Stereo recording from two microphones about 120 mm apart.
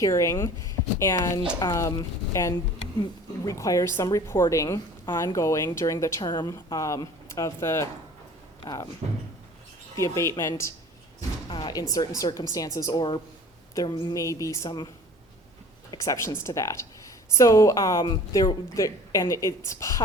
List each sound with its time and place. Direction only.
0.0 s a woman's voice: 25° left (ahead or behind)
9.9 s a woman's voice: 25° left (ahead or behind)
11.4 s a woman's voice: 40° left (ahead or behind)
16.0 s a woman's voice: 25° left (ahead or behind)